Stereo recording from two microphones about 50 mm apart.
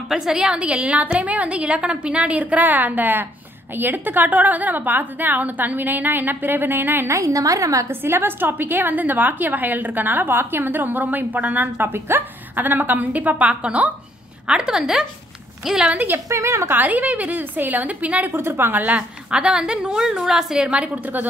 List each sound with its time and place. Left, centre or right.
0.1 s a woman's voice: centre; by 7.1 s right
7.1 s a woman's voice: right
7.9 s a woman's voice: right; by 15.9 s centre
16.3 s a woman's voice: right
16.8 s a woman's voice: right
18.3 s a woman's voice: right
18.7 s a woman's voice: right
19.3 s a woman's voice: centre
20.7 s a woman's voice: right